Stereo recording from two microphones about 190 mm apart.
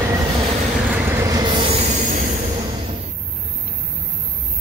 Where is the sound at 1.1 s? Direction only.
15° right (ahead or behind); by 2.2 s 35° right (ahead or behind).